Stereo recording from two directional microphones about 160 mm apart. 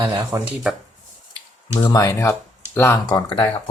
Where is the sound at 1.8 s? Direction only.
25° left (ahead or behind).